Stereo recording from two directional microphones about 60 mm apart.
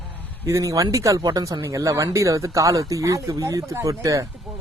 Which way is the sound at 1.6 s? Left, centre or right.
Right.